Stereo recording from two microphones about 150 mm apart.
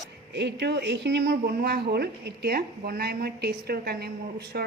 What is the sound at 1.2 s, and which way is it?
A woman's voice, 90° right.